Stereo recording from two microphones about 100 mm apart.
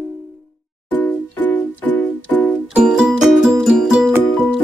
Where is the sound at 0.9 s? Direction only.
15° left (ahead or behind).